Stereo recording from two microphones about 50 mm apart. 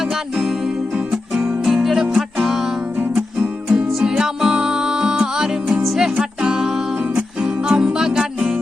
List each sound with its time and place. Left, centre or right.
0.9 s music: centre
3.7 s music: centre
5.8 s music: centre
6.1 s music: centre